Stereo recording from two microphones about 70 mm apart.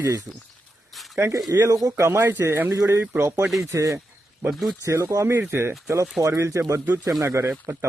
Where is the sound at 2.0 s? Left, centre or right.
Right.